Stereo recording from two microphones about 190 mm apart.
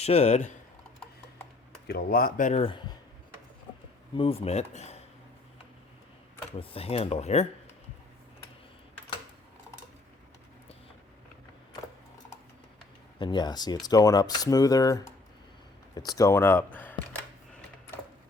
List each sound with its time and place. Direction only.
0.0 s speech: 35° left (ahead or behind)
1.9 s speech: 55° left (ahead or behind)
2.5 s speech: 30° left (ahead or behind)
4.1 s speech: 30° left (ahead or behind)
6.6 s speech: 30° left (ahead or behind)
13.1 s speech: 25° left (ahead or behind)
16.0 s a sound: 20° left (ahead or behind)